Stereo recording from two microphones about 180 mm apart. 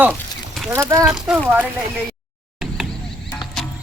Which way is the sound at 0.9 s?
5° right (ahead or behind).